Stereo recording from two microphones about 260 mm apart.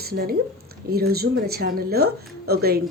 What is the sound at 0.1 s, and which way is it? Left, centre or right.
A woman's voice, right.